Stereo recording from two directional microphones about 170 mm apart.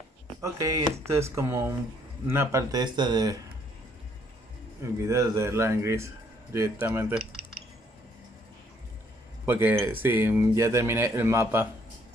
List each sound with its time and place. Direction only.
0.4 s speech: 20° right (ahead or behind)
4.9 s speech: 20° right (ahead or behind)
9.5 s speech: 10° right (ahead or behind)